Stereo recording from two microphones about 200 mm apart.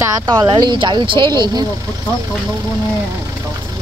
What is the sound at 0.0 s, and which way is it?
Speech, 20° right (ahead or behind).